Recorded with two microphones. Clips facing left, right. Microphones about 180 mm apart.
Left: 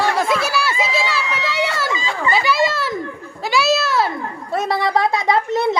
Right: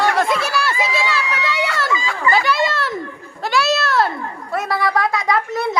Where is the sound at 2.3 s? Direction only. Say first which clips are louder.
Even; 5° left (ahead or behind).